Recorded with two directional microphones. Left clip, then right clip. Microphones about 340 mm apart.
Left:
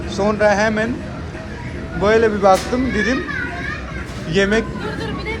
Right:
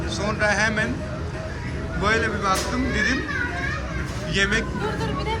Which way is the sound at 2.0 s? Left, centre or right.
Centre.